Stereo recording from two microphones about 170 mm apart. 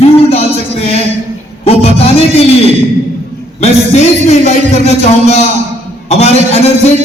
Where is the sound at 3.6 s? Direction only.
40° left (ahead or behind).